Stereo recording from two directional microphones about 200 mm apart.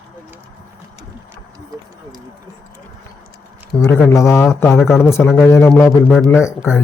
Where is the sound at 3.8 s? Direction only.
5° left (ahead or behind).